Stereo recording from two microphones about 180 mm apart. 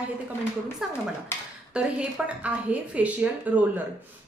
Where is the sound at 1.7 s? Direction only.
5° right (ahead or behind).